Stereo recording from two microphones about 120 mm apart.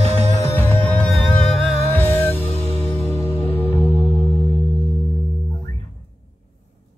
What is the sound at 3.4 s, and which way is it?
Music, 15° left (ahead or behind).